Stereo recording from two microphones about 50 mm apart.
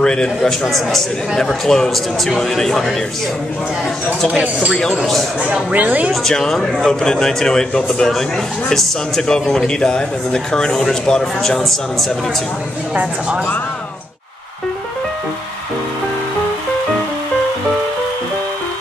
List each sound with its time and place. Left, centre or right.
0.0 s a sound: centre
0.4 s a man's voice: centre
5.4 s speech: right
6.2 s speech: centre